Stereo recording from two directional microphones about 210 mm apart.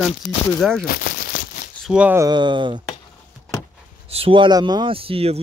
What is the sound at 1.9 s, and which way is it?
Speech, 5° right (ahead or behind).